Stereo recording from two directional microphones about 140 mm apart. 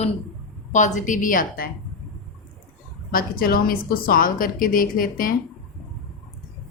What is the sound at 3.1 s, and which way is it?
A woman's voice, 90° left.